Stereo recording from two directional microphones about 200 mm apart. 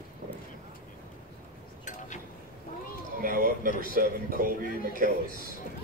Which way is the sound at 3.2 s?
45° right (ahead or behind).